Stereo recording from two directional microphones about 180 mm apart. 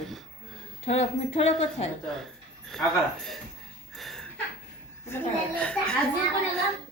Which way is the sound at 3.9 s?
Centre (ahead or behind).